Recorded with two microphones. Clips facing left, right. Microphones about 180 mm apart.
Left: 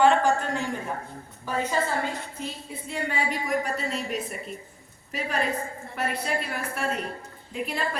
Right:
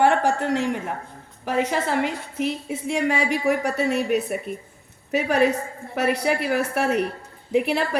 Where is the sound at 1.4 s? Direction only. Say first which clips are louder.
Right 4 dB; 85° right.